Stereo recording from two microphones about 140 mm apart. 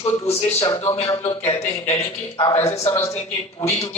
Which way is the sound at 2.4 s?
30° left (ahead or behind).